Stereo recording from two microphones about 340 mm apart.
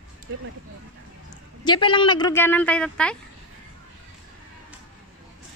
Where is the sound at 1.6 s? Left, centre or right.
Centre.